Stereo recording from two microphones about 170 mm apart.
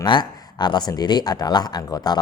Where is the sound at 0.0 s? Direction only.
25° left (ahead or behind).